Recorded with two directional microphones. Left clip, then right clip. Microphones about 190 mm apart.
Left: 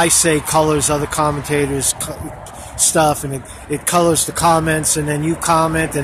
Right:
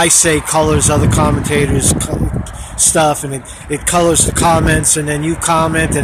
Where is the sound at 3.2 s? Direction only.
10° right (ahead or behind).